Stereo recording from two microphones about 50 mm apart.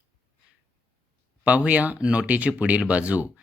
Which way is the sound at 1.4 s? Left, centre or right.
Right.